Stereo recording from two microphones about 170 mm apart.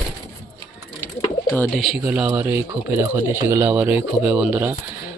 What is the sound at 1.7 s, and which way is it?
Speech, centre (ahead or behind).